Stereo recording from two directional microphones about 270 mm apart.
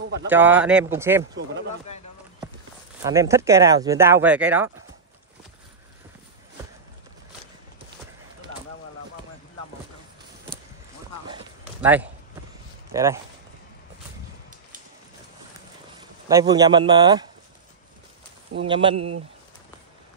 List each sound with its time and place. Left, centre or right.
0.3 s speech: centre
3.0 s speech: centre
11.8 s speech: centre
16.0 s speech: centre
18.6 s speech: centre
18.9 s speech: right